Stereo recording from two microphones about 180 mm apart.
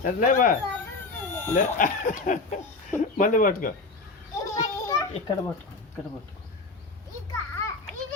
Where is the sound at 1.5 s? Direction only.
45° left (ahead or behind).